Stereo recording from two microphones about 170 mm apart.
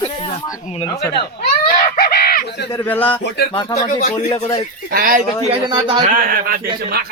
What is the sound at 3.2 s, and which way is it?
Speech, 75° left (ahead or behind).